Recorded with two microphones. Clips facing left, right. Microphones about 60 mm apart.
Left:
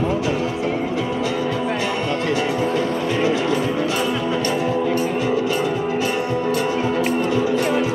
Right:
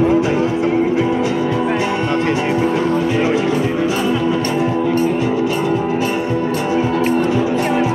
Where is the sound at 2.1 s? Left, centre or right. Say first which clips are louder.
Right 4 dB; right; by 4.4 s centre.